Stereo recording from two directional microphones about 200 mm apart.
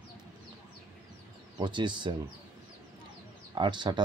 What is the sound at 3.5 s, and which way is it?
Speech, 20° right (ahead or behind).